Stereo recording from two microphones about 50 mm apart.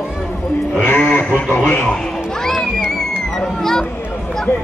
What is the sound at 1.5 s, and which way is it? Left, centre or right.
Speech, left.